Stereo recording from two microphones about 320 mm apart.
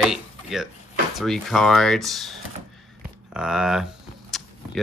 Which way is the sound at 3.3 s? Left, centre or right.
Centre.